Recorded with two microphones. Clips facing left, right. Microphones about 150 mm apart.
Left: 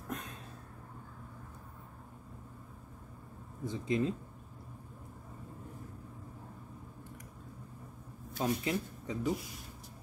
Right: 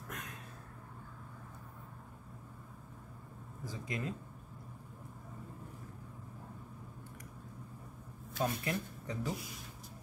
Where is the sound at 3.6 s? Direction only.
25° left (ahead or behind).